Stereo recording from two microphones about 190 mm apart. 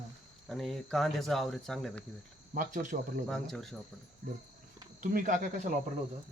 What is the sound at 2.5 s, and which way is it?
Speech, 45° right (ahead or behind).